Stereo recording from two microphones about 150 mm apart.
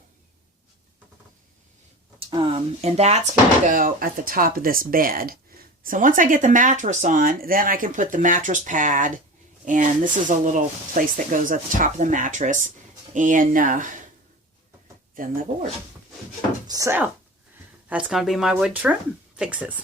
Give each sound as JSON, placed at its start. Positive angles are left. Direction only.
{"t": 2.1, "sound": "speech", "side_deg": -35}
{"t": 5.8, "sound": "speech", "side_deg": -65}
{"t": 11.0, "sound": "speech", "side_deg": -70}
{"t": 15.1, "sound": "speech", "side_deg": -65}
{"t": 16.6, "sound": "speech", "side_deg": -20}